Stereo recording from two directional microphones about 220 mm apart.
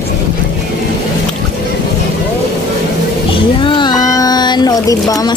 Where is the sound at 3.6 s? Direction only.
20° left (ahead or behind).